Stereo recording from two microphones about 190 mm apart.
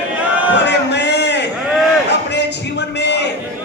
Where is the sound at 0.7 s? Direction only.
65° left (ahead or behind).